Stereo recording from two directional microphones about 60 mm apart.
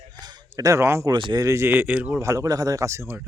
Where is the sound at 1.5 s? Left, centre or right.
Right.